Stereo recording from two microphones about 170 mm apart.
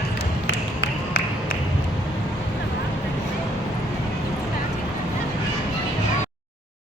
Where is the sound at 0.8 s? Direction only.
70° left (ahead or behind).